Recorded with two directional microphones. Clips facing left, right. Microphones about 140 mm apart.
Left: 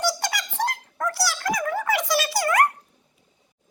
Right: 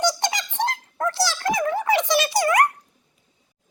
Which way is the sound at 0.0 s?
20° right (ahead or behind).